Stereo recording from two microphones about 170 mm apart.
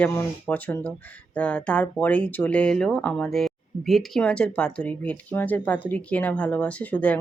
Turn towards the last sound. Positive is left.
turn(degrees=10)  # may be behind; listen again after turning